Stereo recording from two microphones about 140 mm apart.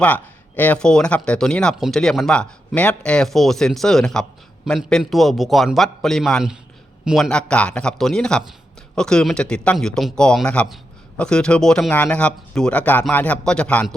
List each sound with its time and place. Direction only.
0.0 s speech: 10° left (ahead or behind)